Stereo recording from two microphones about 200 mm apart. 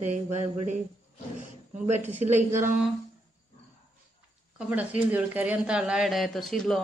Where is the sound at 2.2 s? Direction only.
35° right (ahead or behind).